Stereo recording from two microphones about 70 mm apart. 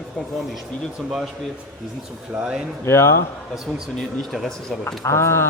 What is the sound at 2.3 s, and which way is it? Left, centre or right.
Speech, centre.